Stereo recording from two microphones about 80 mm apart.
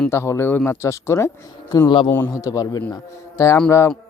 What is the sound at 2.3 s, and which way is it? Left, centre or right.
Speech, left.